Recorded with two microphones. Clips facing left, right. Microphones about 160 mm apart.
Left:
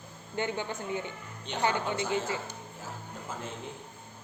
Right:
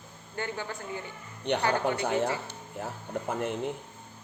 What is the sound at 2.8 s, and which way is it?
Speech, 65° right (ahead or behind).